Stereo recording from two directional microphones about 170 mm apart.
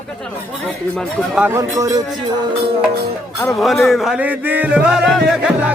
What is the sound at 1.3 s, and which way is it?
Speech, 5° right (ahead or behind).